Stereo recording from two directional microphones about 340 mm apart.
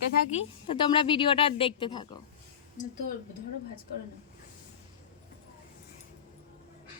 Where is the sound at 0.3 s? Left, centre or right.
Centre.